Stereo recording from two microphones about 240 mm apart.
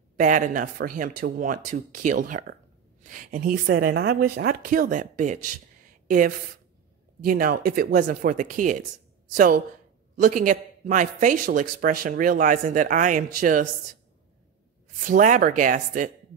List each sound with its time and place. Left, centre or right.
0.2 s a man's voice: right
10.2 s a man's voice: right
15.0 s a man's voice: right